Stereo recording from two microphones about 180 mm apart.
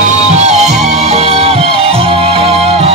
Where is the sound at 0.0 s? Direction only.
40° right (ahead or behind).